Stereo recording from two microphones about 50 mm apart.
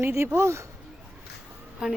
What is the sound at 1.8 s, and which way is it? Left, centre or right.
Speech, centre.